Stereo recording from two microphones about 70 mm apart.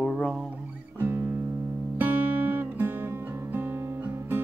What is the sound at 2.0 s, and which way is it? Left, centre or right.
Music, right.